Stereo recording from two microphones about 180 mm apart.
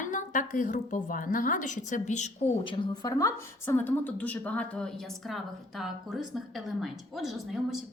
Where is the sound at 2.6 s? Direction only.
25° left (ahead or behind).